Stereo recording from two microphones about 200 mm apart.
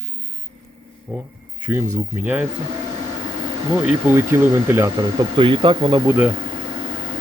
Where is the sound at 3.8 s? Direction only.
10° right (ahead or behind).